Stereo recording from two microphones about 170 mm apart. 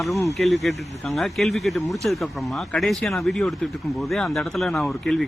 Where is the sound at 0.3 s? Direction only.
Centre (ahead or behind).